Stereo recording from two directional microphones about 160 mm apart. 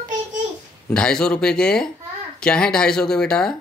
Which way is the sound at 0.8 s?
5° left (ahead or behind).